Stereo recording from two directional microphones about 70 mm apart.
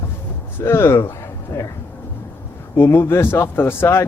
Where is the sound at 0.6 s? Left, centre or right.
Left.